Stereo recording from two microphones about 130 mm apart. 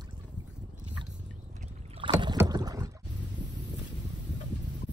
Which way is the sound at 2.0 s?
40° right (ahead or behind).